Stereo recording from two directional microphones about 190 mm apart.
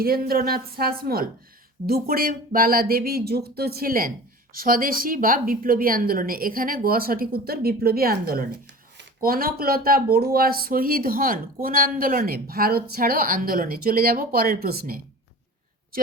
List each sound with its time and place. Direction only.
0.0 s speech: 50° right (ahead or behind)